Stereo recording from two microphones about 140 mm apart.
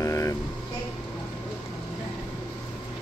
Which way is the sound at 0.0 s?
25° left (ahead or behind).